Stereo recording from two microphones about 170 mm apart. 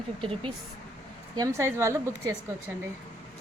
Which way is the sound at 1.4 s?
20° right (ahead or behind).